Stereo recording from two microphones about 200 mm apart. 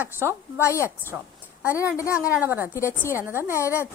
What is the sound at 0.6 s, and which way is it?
Speech, 15° left (ahead or behind).